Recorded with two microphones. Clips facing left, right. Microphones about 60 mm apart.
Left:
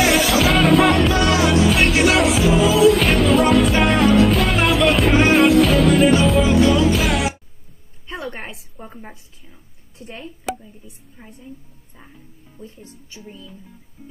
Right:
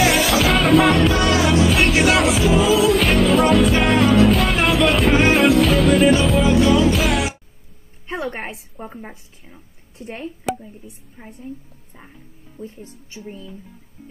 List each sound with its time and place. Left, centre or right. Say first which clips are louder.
0.0 s music: even; centre
8.1 s a sound: right 3 dB; right; by 9.6 s centre
9.9 s speech: right 4 dB; right
10.8 s a woman's voice: right 3 dB; right